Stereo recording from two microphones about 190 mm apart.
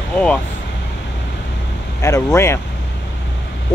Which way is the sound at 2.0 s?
15° left (ahead or behind).